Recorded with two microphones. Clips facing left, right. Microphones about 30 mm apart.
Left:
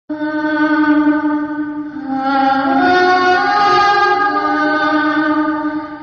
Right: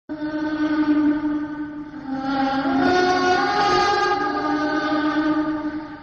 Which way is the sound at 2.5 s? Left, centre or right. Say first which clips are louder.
Left 7 dB; left.